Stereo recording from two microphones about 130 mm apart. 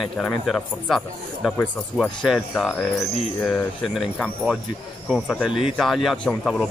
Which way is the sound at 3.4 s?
15° left (ahead or behind).